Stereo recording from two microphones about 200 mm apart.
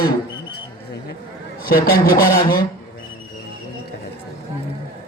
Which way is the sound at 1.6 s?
45° left (ahead or behind).